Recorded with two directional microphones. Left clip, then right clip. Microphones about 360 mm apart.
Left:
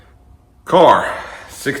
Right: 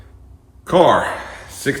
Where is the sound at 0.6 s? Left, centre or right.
Centre.